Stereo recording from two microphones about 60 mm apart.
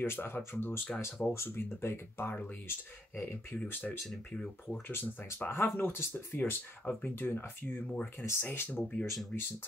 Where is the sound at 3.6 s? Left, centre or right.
Left.